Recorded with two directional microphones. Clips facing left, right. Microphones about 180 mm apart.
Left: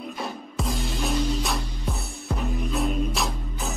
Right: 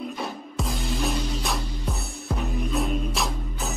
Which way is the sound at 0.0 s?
Centre (ahead or behind).